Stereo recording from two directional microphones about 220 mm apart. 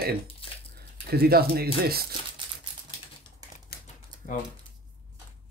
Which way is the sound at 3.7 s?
45° left (ahead or behind).